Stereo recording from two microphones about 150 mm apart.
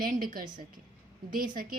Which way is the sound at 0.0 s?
65° right (ahead or behind).